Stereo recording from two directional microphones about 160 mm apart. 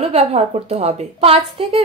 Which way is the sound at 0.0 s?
40° right (ahead or behind).